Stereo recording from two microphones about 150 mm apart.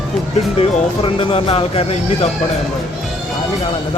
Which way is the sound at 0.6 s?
35° left (ahead or behind).